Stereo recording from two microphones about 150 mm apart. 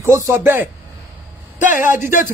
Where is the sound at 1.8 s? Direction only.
15° right (ahead or behind).